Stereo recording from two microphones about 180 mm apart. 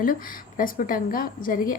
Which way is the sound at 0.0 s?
50° left (ahead or behind).